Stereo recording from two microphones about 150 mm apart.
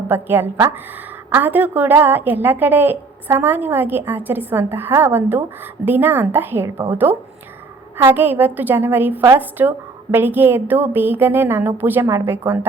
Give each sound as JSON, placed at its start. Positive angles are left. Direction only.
{"t": 0.1, "sound": "a woman's voice", "side_deg": -15}